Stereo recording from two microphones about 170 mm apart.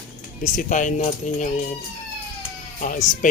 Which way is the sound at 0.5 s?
45° left (ahead or behind).